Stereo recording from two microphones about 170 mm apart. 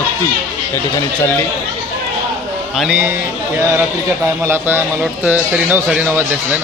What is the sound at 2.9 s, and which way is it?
Speech, 15° right (ahead or behind).